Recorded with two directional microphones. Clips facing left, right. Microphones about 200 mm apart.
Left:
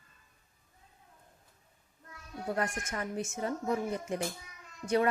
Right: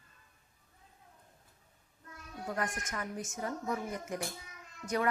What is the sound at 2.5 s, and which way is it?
Speech, 30° left (ahead or behind).